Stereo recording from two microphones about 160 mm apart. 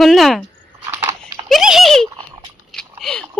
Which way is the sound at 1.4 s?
Centre (ahead or behind).